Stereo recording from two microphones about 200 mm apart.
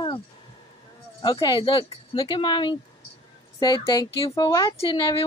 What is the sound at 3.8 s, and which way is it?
Speech, 25° left (ahead or behind).